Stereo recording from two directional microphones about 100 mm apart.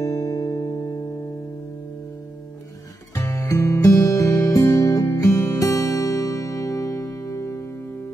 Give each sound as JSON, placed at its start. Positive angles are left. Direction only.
{"t": 0.0, "sound": "music", "side_deg": 35}
{"t": 3.3, "sound": "music", "side_deg": 30}